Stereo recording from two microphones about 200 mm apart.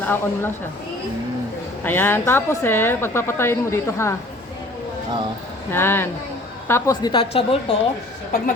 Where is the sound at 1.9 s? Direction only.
10° left (ahead or behind).